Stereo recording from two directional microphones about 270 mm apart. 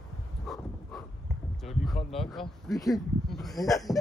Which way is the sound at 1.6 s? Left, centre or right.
Centre.